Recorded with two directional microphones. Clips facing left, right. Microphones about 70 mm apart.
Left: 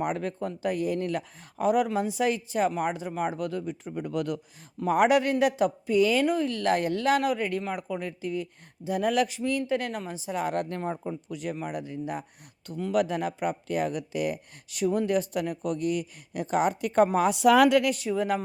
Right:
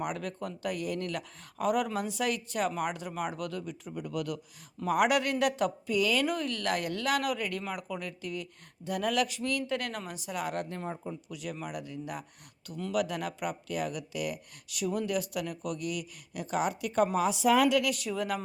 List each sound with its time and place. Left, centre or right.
0.0 s speech: left
10.5 s speech: left
11.3 s speech: left
12.9 s speech: left
17.8 s speech: left